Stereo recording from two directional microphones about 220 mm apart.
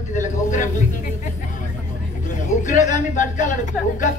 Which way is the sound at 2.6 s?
35° left (ahead or behind).